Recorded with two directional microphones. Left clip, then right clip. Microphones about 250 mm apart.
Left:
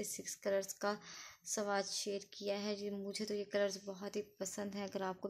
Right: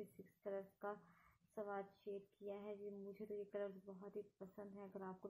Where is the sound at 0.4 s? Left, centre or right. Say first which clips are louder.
Left 12 dB; left.